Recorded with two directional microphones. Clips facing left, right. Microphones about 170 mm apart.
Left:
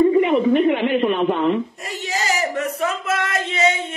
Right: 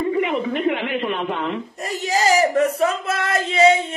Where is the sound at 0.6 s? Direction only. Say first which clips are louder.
Left 5 dB; 25° left (ahead or behind).